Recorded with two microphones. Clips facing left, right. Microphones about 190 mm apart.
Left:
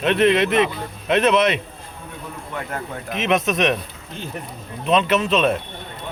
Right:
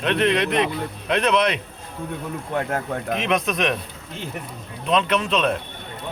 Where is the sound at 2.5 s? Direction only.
55° right (ahead or behind).